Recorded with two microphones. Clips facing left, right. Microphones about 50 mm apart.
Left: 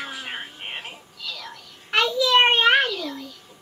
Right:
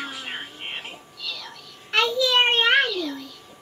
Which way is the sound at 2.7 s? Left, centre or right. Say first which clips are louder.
Even; centre.